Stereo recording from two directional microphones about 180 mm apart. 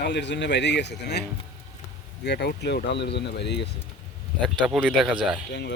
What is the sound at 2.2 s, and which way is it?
Speech, 70° left (ahead or behind).